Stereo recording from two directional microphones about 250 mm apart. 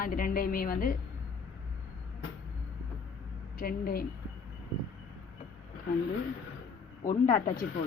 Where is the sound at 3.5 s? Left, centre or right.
Left.